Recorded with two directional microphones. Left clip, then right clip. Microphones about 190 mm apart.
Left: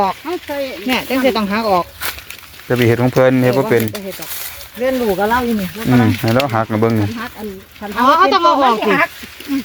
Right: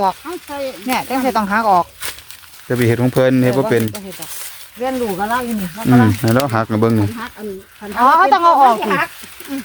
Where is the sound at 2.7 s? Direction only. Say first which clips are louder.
Left 2 dB; 15° right (ahead or behind).